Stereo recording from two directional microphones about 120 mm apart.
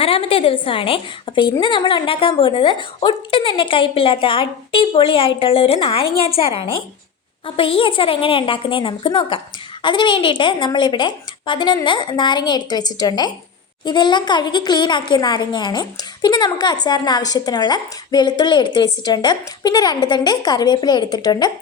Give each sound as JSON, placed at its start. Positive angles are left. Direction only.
{"t": 0.0, "sound": "a woman's voice", "side_deg": 50}